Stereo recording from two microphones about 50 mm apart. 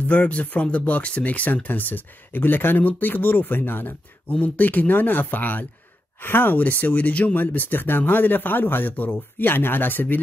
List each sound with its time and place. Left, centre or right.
0.0 s speech: left
6.8 s speech: left
9.5 s speech: left